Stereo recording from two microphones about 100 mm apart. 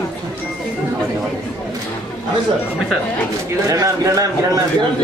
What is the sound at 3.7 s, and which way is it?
Speech, 35° right (ahead or behind).